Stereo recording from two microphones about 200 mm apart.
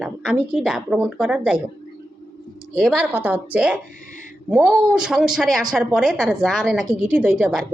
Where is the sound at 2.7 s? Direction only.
5° right (ahead or behind).